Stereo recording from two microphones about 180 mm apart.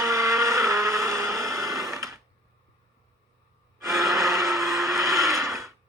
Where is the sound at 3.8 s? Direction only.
20° right (ahead or behind).